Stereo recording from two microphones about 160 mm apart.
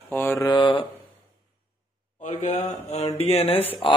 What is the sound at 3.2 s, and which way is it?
Speech, 40° left (ahead or behind).